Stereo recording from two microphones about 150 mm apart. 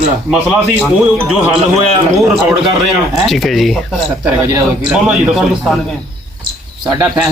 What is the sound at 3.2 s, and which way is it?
A man's voice, centre (ahead or behind).